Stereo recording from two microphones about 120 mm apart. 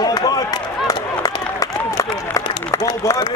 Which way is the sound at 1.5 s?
30° left (ahead or behind).